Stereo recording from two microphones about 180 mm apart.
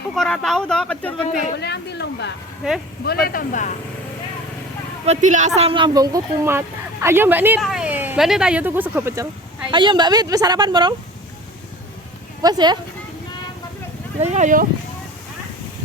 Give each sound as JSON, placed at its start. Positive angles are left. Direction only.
{"t": 0.2, "sound": "speech", "side_deg": 0}
{"t": 1.3, "sound": "speech", "side_deg": 45}
{"t": 1.5, "sound": "speech", "side_deg": 70}
{"t": 3.1, "sound": "speech", "side_deg": 55}
{"t": 5.0, "sound": "speech", "side_deg": -45}
{"t": 5.5, "sound": "speech", "side_deg": -30}
{"t": 9.7, "sound": "a woman's voice", "side_deg": -25}
{"t": 12.4, "sound": "a woman's voice", "side_deg": -25}
{"t": 14.2, "sound": "speech", "side_deg": -40}